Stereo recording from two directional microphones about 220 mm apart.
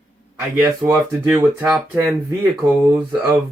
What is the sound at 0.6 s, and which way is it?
Speech, 10° right (ahead or behind).